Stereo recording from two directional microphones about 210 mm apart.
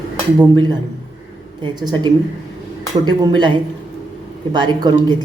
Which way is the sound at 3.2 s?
20° right (ahead or behind).